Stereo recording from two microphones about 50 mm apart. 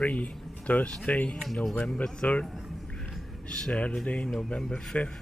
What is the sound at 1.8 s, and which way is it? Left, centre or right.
Speech, left.